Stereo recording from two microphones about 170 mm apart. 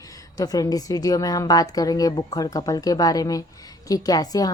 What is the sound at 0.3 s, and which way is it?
A woman's voice, 20° left (ahead or behind).